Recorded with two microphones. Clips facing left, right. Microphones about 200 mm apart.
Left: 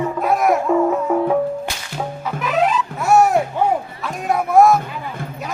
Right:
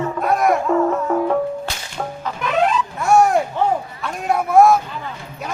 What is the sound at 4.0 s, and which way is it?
Speech, centre (ahead or behind).